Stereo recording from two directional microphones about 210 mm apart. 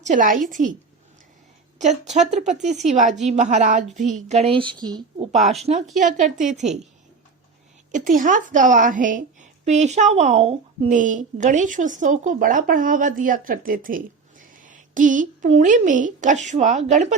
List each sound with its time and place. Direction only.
0.0 s a woman's voice: 35° right (ahead or behind)
1.8 s a woman's voice: 35° right (ahead or behind)
5.3 s a woman's voice: 30° right (ahead or behind)
7.9 s a woman's voice: 40° right (ahead or behind)